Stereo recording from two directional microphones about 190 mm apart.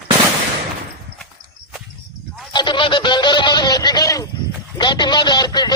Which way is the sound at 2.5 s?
25° left (ahead or behind).